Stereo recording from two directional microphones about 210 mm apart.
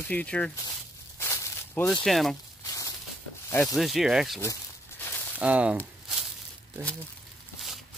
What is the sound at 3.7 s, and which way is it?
Speech, centre (ahead or behind).